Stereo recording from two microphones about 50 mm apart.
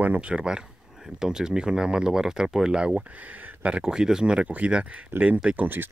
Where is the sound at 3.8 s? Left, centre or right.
Centre.